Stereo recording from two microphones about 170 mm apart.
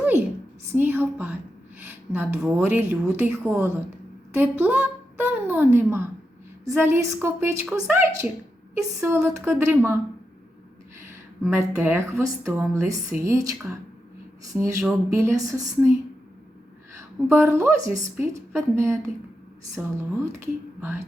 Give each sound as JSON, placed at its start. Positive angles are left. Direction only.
{"t": 0.0, "sound": "a sound", "side_deg": -10}
{"t": 0.7, "sound": "a woman's voice", "side_deg": -10}
{"t": 9.0, "sound": "speech", "side_deg": -15}
{"t": 11.1, "sound": "speech", "side_deg": -15}
{"t": 17.0, "sound": "a woman's voice", "side_deg": -15}